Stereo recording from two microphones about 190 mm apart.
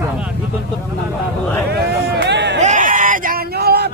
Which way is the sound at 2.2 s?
65° right (ahead or behind).